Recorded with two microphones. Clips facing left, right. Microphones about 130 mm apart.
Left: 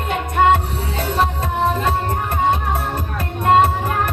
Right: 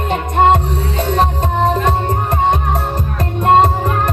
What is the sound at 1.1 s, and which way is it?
Music, 40° right (ahead or behind).